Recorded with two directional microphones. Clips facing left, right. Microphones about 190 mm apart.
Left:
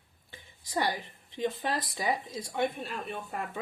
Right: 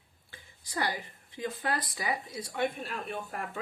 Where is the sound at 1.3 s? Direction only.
25° left (ahead or behind).